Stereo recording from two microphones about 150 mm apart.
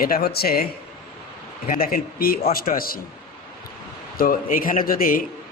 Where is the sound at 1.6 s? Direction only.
70° left (ahead or behind).